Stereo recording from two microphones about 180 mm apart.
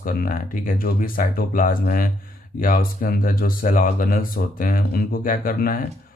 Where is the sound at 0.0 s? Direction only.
50° left (ahead or behind).